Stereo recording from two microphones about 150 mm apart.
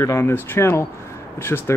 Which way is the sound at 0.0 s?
20° left (ahead or behind).